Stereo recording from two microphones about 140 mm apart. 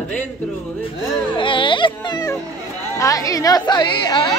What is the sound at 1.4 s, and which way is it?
Speech, 35° left (ahead or behind).